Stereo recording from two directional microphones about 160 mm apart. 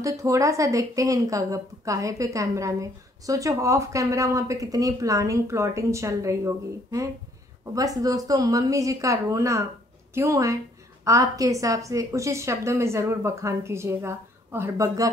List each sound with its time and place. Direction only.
0.0 s a woman's voice: 20° right (ahead or behind)